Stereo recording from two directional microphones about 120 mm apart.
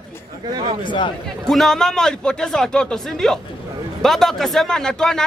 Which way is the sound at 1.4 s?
5° left (ahead or behind).